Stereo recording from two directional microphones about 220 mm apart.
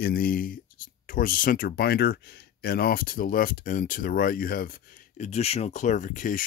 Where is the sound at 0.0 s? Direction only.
40° left (ahead or behind).